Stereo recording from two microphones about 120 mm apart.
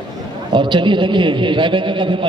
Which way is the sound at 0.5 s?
40° right (ahead or behind).